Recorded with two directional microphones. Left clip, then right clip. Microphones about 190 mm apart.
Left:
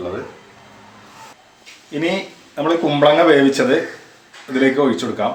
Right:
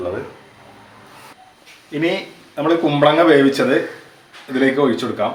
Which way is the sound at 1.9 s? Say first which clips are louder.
Right 1 dB; 10° left (ahead or behind).